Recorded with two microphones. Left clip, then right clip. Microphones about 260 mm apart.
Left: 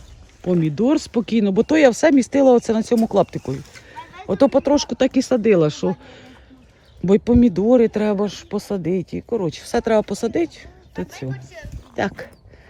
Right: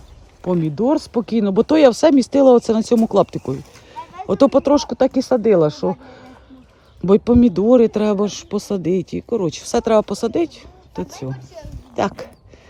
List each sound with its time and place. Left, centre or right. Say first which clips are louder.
0.4 s speech: right 1 dB; centre
4.8 s speech: right 2 dB; centre
5.2 s speech: right 1 dB; left
7.0 s speech: right 2 dB; centre